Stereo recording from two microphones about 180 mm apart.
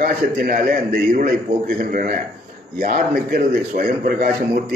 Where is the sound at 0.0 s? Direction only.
50° right (ahead or behind).